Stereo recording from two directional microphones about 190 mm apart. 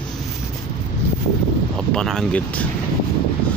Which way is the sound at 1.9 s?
5° left (ahead or behind).